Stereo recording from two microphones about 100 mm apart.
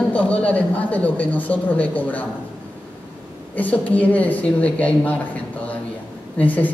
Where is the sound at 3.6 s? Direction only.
15° left (ahead or behind).